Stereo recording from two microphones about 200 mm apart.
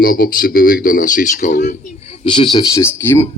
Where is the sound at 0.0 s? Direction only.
45° left (ahead or behind).